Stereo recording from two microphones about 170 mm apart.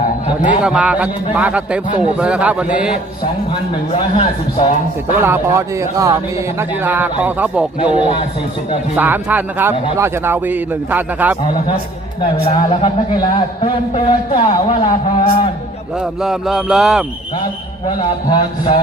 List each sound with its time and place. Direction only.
0.6 s a man's voice: 5° right (ahead or behind)
3.9 s a man's voice: 30° left (ahead or behind)
5.2 s a man's voice: 15° right (ahead or behind)
7.9 s a man's voice: 40° right (ahead or behind)
9.0 s a man's voice: 10° right (ahead or behind)
12.2 s a man's voice: 30° left (ahead or behind)
16.2 s speech: 5° right (ahead or behind)
17.4 s a man's voice: 25° left (ahead or behind)